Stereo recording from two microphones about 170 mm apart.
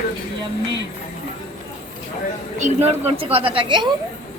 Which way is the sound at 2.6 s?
45° right (ahead or behind).